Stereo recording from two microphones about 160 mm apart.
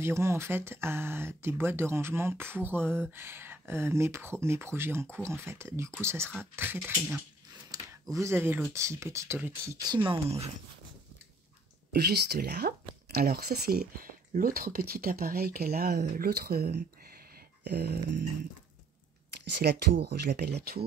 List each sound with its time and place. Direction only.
0.0 s speech: 15° right (ahead or behind)
7.7 s a sound: 20° right (ahead or behind)
8.7 s speech: 15° right (ahead or behind)
11.9 s speech: 90° right; by 16.8 s 75° right (ahead or behind)
17.6 s speech: 85° right
19.6 s speech: 90° right